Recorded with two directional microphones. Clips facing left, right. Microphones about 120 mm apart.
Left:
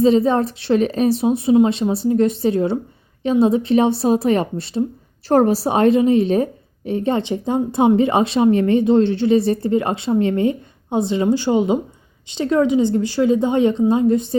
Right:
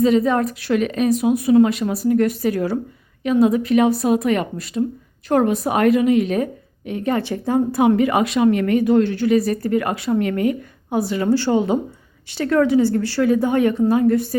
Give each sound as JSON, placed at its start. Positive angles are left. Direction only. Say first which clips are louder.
{"t": 0.0, "sound": "a woman's voice", "louder": "left 2 dB", "side_deg": 30}